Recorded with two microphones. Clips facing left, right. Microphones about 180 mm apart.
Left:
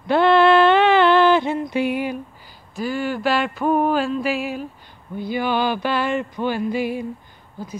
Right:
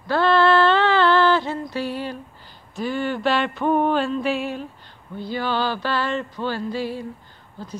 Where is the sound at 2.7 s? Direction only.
5° left (ahead or behind).